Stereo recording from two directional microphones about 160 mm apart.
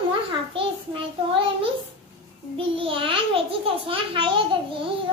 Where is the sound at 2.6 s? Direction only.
35° right (ahead or behind).